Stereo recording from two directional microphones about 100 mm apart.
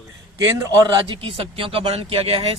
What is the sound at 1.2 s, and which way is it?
Speech, 65° right (ahead or behind).